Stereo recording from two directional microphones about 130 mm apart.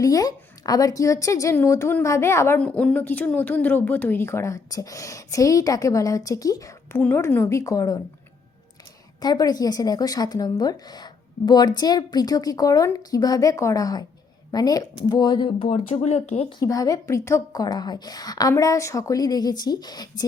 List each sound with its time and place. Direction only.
0.0 s a woman's voice: 30° left (ahead or behind)
2.6 s a woman's voice: 10° left (ahead or behind)
7.0 s a woman's voice: 15° left (ahead or behind)
9.2 s a woman's voice: 30° left (ahead or behind); by 16.5 s 60° left (ahead or behind)
16.5 s a woman's voice: 30° left (ahead or behind)